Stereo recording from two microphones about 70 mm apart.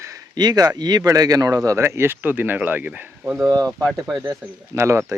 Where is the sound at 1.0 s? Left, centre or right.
Right.